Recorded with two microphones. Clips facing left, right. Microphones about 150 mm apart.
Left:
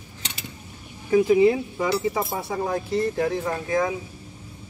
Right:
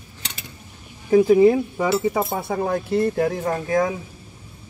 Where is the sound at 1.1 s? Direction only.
45° right (ahead or behind).